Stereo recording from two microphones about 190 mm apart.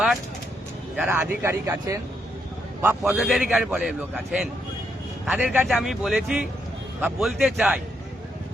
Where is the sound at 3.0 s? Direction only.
Centre (ahead or behind).